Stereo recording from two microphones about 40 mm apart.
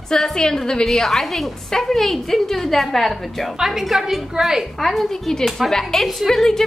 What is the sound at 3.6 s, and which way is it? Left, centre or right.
A woman's voice, centre.